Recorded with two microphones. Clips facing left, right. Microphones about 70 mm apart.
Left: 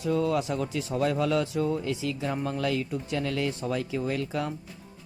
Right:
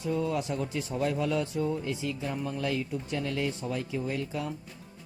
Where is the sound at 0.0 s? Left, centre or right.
Left.